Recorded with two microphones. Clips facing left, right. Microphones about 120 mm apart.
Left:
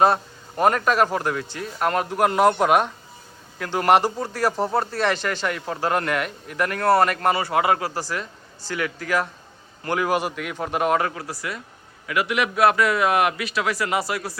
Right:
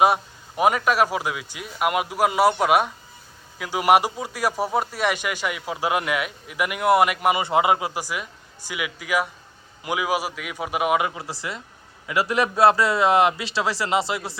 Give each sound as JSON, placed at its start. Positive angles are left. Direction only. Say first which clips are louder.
{"t": 0.0, "sound": "speech", "louder": "even", "side_deg": -10}
{"t": 11.2, "sound": "a man's voice", "louder": "left 1 dB", "side_deg": -25}